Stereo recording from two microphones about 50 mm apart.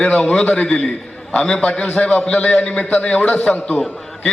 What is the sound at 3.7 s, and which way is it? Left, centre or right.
Speech, centre.